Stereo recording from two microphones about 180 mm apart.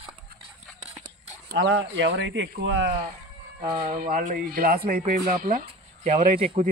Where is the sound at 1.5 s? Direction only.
70° right (ahead or behind); by 2.9 s 90° right.